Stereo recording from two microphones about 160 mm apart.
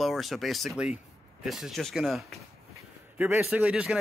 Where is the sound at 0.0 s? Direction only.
Centre (ahead or behind).